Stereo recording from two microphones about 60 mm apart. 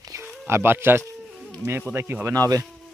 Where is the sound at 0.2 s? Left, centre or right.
Right.